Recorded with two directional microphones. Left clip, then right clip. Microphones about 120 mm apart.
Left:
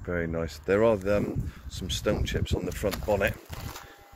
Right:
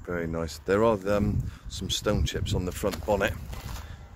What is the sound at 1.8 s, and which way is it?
Speech, 40° right (ahead or behind).